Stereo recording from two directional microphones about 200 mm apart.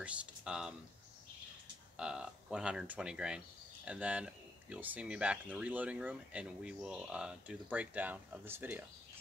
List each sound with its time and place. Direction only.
0.0 s speech: 5° right (ahead or behind)
2.0 s speech: 5° right (ahead or behind)